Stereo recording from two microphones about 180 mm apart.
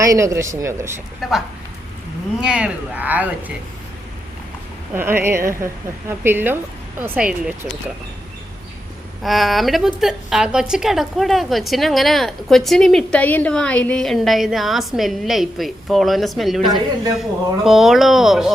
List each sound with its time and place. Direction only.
0.0 s a woman's voice: 15° right (ahead or behind)
1.2 s a woman's voice: centre (ahead or behind)
2.4 s a woman's voice: 5° right (ahead or behind)
4.9 s a woman's voice: 10° right (ahead or behind)
9.2 s a woman's voice: centre (ahead or behind)